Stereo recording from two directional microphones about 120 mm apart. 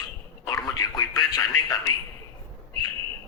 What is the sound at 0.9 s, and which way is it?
Speech, 35° left (ahead or behind).